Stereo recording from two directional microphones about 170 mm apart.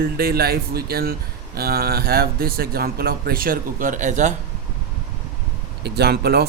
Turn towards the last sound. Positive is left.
turn(degrees=-70)  # may be behind; listen again after turning